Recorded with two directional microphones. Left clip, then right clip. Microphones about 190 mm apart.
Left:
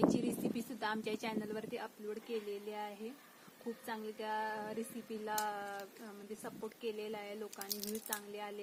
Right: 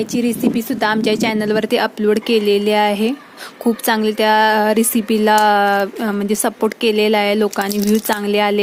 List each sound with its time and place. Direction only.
0.1 s speech: 15° right (ahead or behind); by 8.6 s 55° right (ahead or behind)